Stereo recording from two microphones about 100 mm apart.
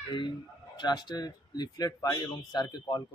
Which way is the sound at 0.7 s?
45° left (ahead or behind).